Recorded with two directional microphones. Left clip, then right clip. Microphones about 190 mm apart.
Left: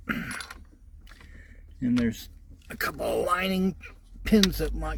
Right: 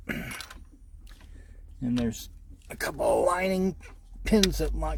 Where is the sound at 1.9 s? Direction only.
10° right (ahead or behind).